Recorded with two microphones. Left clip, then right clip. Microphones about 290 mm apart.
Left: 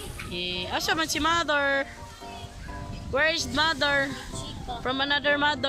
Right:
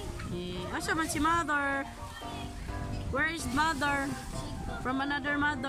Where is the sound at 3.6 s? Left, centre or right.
Centre.